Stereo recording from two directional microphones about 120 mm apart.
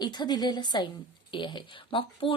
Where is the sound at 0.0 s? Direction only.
35° left (ahead or behind).